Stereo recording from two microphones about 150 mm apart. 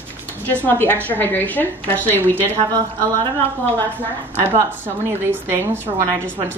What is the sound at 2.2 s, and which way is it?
Speech, 15° right (ahead or behind).